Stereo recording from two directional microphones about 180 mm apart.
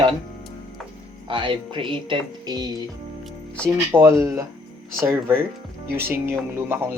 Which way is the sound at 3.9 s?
15° right (ahead or behind).